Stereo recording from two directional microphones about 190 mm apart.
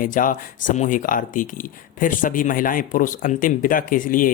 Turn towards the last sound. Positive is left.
turn(degrees=45)  # may be behind; listen again after turning